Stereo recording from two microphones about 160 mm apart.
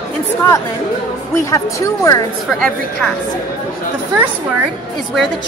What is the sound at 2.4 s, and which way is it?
Speech, 5° left (ahead or behind).